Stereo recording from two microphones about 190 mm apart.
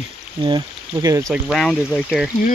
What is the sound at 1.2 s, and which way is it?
Speech, centre (ahead or behind).